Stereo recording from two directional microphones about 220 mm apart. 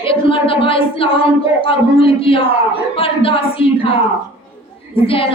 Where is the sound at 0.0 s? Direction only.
25° left (ahead or behind).